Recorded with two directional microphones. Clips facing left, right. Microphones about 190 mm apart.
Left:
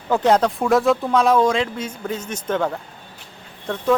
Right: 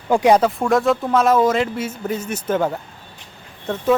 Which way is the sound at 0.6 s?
Centre (ahead or behind).